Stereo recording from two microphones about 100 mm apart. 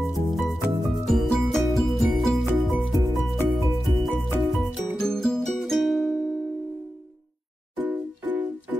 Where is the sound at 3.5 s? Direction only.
Centre (ahead or behind).